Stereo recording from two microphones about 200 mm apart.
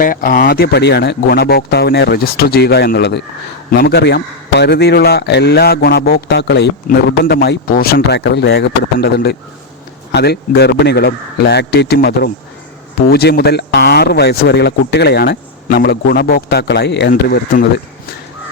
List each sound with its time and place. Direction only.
0.0 s a man's voice: 45° left (ahead or behind)